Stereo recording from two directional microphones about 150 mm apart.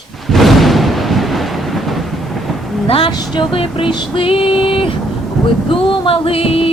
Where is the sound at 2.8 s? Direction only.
40° left (ahead or behind).